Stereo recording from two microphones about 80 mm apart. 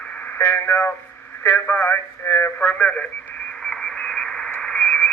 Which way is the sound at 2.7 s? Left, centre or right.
Centre.